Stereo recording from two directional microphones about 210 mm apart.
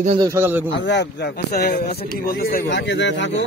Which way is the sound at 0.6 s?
60° left (ahead or behind).